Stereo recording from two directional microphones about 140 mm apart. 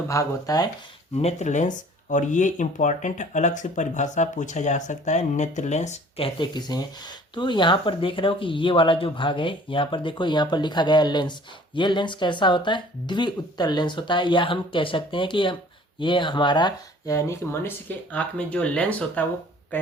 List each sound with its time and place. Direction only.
0.1 s speech: 25° left (ahead or behind)
1.1 s speech: 50° left (ahead or behind); by 19.9 s 15° left (ahead or behind)